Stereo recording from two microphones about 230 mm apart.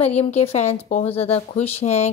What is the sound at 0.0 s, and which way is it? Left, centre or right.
A woman's voice, left.